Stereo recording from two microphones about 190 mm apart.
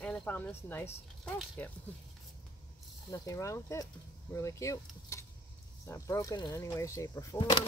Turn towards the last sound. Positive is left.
turn(degrees=20)  # may be behind; listen again after turning